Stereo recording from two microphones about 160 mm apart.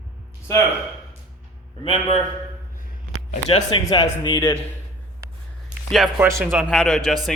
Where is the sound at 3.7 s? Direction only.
25° left (ahead or behind).